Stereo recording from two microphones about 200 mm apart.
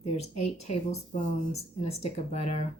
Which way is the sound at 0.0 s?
30° left (ahead or behind).